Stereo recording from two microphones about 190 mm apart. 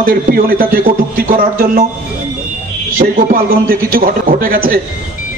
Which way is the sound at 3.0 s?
50° right (ahead or behind).